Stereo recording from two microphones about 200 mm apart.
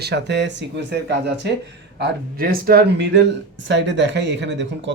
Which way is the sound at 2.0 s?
50° right (ahead or behind).